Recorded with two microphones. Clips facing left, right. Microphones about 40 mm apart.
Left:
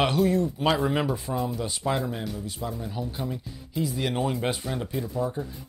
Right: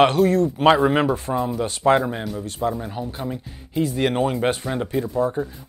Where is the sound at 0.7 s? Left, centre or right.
Right.